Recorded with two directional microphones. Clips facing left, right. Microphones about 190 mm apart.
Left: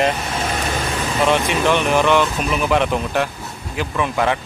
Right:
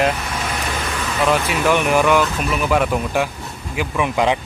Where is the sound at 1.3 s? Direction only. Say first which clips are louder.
Even; 5° right (ahead or behind).